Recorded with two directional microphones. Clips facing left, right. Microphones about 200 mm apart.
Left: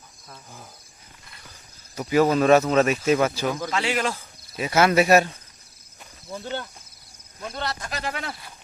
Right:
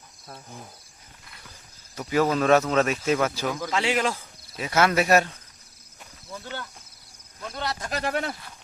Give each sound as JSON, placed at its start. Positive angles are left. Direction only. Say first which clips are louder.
{"t": 2.0, "sound": "speech", "louder": "left 3 dB", "side_deg": 10}
{"t": 3.7, "sound": "speech", "louder": "even", "side_deg": -20}
{"t": 4.5, "sound": "speech", "louder": "left 3 dB", "side_deg": 10}
{"t": 6.3, "sound": "speech", "louder": "left 5 dB", "side_deg": 25}
{"t": 7.5, "sound": "speech", "louder": "even", "side_deg": -10}
{"t": 7.9, "sound": "speech", "louder": "right 4 dB", "side_deg": -50}